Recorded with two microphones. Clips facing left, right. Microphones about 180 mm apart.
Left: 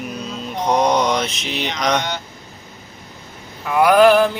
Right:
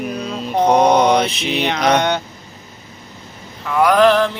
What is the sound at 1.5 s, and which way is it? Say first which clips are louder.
Mantra: right 6 dB; 60° right (ahead or behind).